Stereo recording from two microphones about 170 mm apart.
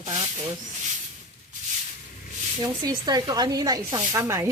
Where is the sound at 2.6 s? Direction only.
20° right (ahead or behind).